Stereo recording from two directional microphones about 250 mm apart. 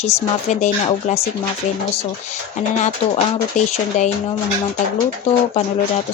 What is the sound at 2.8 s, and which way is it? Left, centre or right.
Speech, left.